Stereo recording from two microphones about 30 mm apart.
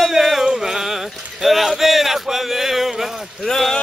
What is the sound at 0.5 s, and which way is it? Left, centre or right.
Music, centre.